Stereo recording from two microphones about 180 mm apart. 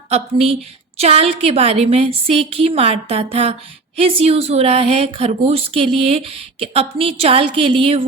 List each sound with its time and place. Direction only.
0.1 s a woman's voice: 35° right (ahead or behind)